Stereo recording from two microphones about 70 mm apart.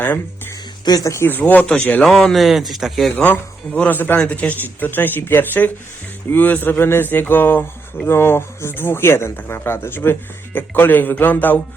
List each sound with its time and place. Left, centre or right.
0.9 s speech: left
1.2 s speech: left
1.6 s speech: centre
3.7 s speech: centre
3.9 s speech: left